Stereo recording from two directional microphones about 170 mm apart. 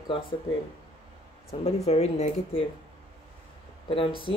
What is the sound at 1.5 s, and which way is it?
Speech, 40° left (ahead or behind).